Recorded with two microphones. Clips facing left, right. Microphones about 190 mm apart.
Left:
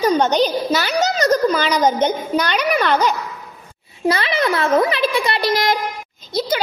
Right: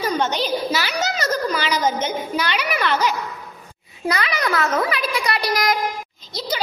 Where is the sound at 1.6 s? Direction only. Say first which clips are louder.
Left 5 dB; 35° left (ahead or behind).